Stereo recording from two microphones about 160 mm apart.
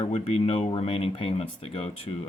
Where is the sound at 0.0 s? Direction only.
40° left (ahead or behind).